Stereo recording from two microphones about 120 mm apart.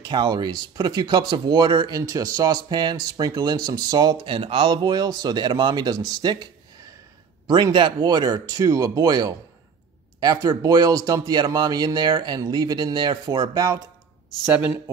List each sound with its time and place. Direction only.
0.0 s speech: 35° right (ahead or behind)
2.0 s speech: 30° right (ahead or behind)
14.4 s speech: 10° right (ahead or behind)